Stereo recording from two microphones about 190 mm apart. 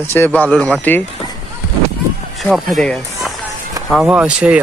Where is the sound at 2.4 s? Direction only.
Centre (ahead or behind).